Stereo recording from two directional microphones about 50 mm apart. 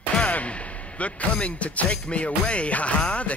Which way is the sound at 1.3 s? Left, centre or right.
Left.